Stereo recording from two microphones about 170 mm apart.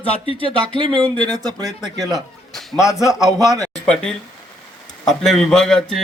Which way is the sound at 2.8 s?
5° right (ahead or behind).